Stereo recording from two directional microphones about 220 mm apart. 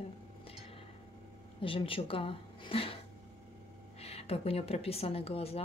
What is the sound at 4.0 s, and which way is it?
Speech, 25° left (ahead or behind).